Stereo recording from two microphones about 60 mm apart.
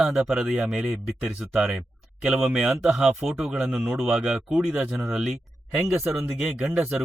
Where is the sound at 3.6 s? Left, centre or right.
Right.